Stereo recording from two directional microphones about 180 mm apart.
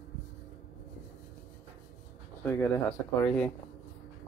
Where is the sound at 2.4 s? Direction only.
10° left (ahead or behind).